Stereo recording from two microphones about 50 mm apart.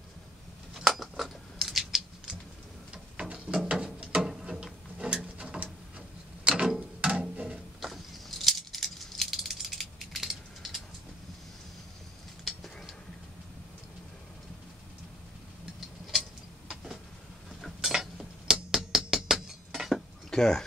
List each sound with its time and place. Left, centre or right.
0.7 s scissors: centre
2.9 s a sound: right
7.8 s rattle: centre
12.4 s a sound: centre
16.6 s vehicle: centre
17.7 s cutlery: centre
18.5 s music: centre
19.1 s chink: centre
20.2 s speech: centre